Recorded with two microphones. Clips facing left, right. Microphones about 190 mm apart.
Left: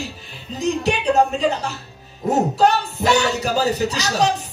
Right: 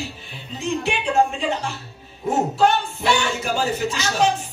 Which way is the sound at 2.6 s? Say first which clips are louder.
Left 2 dB; 40° left (ahead or behind).